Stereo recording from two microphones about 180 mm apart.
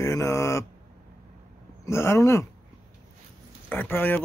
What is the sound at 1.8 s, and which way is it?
Speech, 15° left (ahead or behind).